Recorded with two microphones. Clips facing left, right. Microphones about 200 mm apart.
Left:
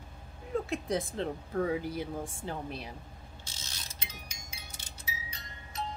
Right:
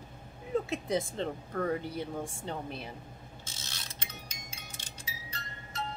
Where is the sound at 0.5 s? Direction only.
Centre (ahead or behind).